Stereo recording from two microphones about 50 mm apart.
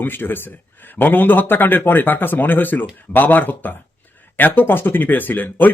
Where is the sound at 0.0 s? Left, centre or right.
Left.